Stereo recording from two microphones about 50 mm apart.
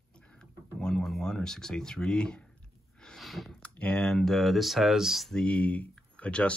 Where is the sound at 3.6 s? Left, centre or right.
Left.